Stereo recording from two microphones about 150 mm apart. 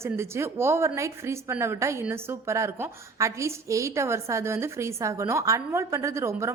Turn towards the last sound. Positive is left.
turn(degrees=-20)  # may be behind; listen again after turning